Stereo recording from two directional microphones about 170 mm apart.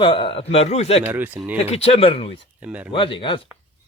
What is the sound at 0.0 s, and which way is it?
A man's voice, 30° left (ahead or behind).